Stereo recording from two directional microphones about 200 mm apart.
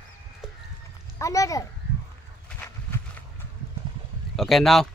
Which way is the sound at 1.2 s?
15° left (ahead or behind).